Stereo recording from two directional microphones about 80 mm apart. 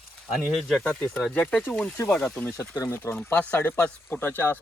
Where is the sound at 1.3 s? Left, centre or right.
Centre.